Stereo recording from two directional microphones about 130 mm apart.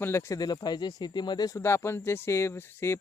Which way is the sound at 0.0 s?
20° left (ahead or behind).